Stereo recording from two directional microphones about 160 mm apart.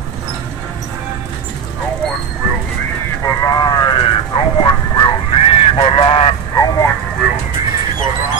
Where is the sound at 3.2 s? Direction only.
25° left (ahead or behind).